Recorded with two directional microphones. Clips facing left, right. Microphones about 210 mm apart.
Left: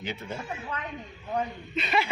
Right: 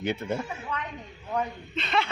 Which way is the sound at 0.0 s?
55° right (ahead or behind).